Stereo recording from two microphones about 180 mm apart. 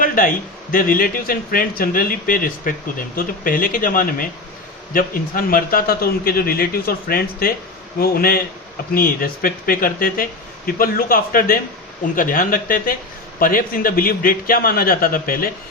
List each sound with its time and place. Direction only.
0.0 s a man's voice: 50° left (ahead or behind)